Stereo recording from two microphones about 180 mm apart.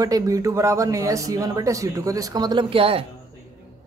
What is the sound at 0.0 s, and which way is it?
Speech, 20° right (ahead or behind).